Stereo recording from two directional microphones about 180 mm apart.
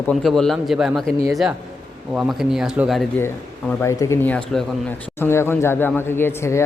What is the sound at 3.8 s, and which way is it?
Speech, 15° left (ahead or behind).